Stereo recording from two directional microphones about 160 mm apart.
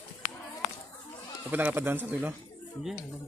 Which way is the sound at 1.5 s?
10° right (ahead or behind).